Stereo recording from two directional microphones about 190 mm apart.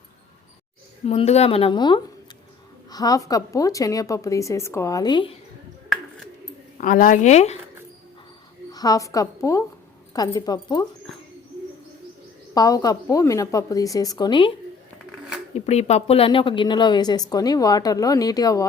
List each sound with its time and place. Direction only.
1.0 s a woman's voice: 35° left (ahead or behind)
6.7 s speech: 45° left (ahead or behind)
8.7 s a woman's voice: 20° left (ahead or behind)
12.5 s a woman's voice: 20° left (ahead or behind)
15.5 s a woman's voice: 35° left (ahead or behind); by 18.7 s 20° left (ahead or behind)